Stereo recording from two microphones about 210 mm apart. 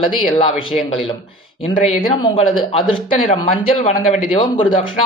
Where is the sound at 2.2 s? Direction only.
25° left (ahead or behind).